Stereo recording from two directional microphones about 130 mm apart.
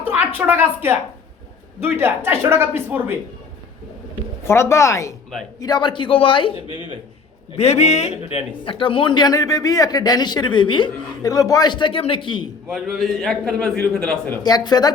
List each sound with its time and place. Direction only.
0.1 s a woman's voice: 15° right (ahead or behind)
4.4 s a woman's voice: 20° left (ahead or behind); by 6.8 s 40° left (ahead or behind)
7.5 s a man's voice: 55° left (ahead or behind)
8.6 s speech: 40° left (ahead or behind)
12.7 s a man's voice: centre (ahead or behind)
14.4 s speech: 30° left (ahead or behind)